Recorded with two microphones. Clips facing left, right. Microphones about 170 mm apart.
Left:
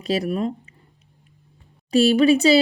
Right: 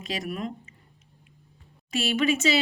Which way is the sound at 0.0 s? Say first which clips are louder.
Left 9 dB; 35° left (ahead or behind).